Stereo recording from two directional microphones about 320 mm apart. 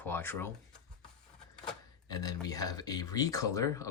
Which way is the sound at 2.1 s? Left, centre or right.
Centre.